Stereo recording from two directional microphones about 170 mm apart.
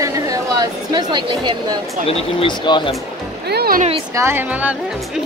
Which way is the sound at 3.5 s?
65° right (ahead or behind).